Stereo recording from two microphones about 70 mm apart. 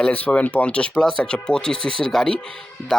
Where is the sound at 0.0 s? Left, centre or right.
Centre.